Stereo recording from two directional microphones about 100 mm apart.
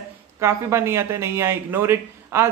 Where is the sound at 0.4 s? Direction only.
25° right (ahead or behind).